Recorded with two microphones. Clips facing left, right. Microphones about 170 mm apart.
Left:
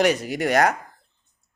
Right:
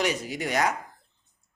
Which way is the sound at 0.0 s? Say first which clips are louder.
Left 7 dB; 65° left (ahead or behind).